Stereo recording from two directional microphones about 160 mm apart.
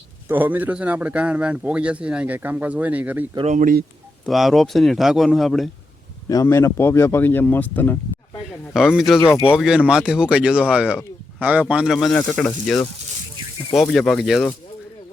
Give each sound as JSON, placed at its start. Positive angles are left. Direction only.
{"t": 0.3, "sound": "a man's voice", "side_deg": -10}
{"t": 3.4, "sound": "speech", "side_deg": -50}
{"t": 4.3, "sound": "speech", "side_deg": 0}
{"t": 6.2, "sound": "speech", "side_deg": 20}
{"t": 8.7, "sound": "a man's voice", "side_deg": -5}
{"t": 13.7, "sound": "speech", "side_deg": 5}